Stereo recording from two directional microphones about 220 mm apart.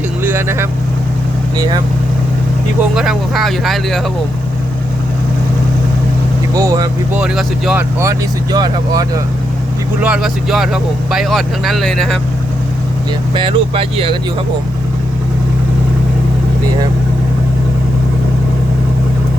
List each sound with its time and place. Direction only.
0.2 s vehicle: 10° right (ahead or behind)
1.5 s speech: 15° right (ahead or behind)
2.9 s speech: centre (ahead or behind)
6.5 s speech: 15° right (ahead or behind)
7.2 s speech: 5° right (ahead or behind); by 9.2 s 20° right (ahead or behind)
10.0 s speech: 5° right (ahead or behind)
13.3 s speech: 25° right (ahead or behind)